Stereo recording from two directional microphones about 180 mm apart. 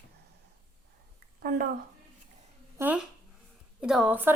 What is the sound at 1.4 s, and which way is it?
Speech, 55° right (ahead or behind).